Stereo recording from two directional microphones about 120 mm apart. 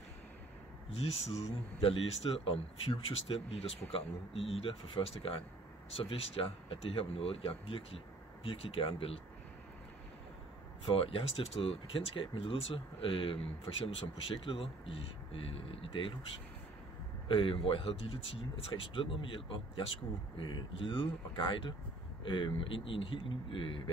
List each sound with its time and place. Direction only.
0.9 s speech: 55° left (ahead or behind)
11.0 s speech: 50° left (ahead or behind)
17.3 s speech: 45° left (ahead or behind)
22.2 s speech: 45° left (ahead or behind)